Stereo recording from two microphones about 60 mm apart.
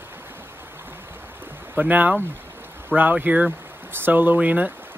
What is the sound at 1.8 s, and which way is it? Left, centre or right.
Speech, right.